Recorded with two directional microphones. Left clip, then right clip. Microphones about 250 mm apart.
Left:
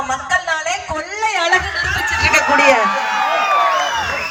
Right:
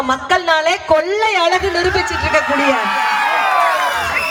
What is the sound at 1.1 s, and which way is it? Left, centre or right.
Speech, right.